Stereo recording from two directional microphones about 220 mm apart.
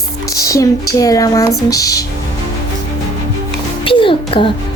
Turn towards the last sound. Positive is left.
turn(degrees=25)  # may be behind; listen again after turning